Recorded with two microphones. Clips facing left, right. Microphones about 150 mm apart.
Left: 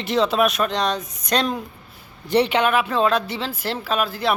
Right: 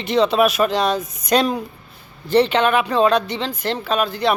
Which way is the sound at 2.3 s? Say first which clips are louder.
Right 3 dB; 10° left (ahead or behind).